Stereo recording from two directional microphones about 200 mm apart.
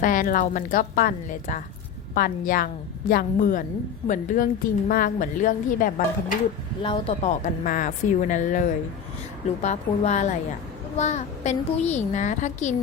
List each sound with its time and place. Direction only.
0.0 s a child's voice: 40° left (ahead or behind)
6.8 s speech: 25° left (ahead or behind)
7.3 s a child's voice: 40° left (ahead or behind)